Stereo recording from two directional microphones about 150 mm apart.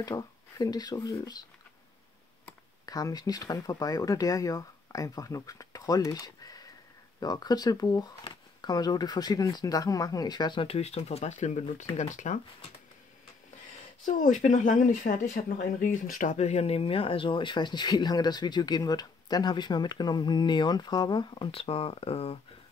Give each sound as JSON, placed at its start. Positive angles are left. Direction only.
{"t": 0.0, "sound": "speech", "side_deg": 25}
{"t": 2.8, "sound": "speech", "side_deg": 25}
{"t": 14.0, "sound": "speech", "side_deg": 60}